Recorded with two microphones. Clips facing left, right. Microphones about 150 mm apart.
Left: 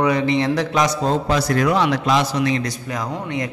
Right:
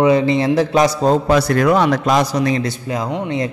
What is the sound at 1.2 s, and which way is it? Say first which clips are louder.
A man's voice: right 4 dB; 55° right (ahead or behind).